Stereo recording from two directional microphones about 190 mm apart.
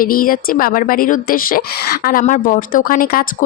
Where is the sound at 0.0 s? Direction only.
50° left (ahead or behind).